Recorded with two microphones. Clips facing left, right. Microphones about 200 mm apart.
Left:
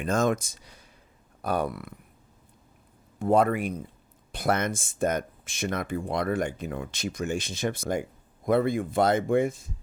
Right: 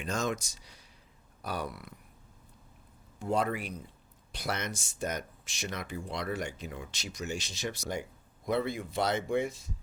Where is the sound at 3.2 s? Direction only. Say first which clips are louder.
Left 8 dB; 55° left (ahead or behind).